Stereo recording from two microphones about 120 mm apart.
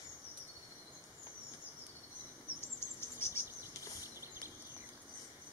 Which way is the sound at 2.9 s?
20° left (ahead or behind).